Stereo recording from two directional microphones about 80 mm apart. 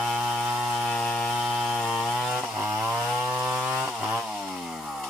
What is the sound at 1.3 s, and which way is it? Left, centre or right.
Chainsaw, centre.